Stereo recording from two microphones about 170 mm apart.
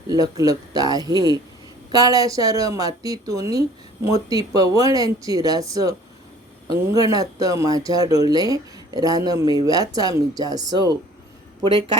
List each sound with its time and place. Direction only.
0.1 s speech: 20° right (ahead or behind)